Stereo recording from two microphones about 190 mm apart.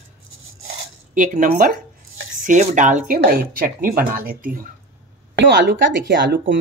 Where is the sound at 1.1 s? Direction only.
45° right (ahead or behind).